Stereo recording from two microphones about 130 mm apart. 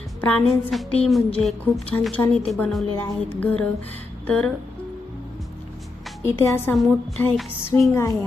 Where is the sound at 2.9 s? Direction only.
10° left (ahead or behind).